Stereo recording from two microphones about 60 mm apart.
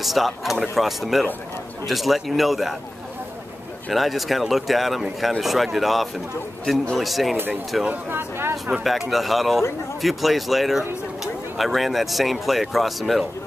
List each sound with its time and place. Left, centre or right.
0.0 s speech: centre
3.9 s speech: centre
7.9 s speech: right
8.7 s speech: centre